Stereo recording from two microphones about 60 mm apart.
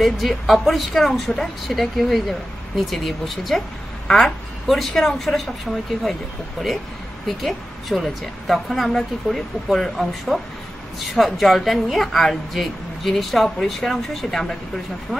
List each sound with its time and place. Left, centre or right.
0.0 s speech: centre
7.2 s speech: centre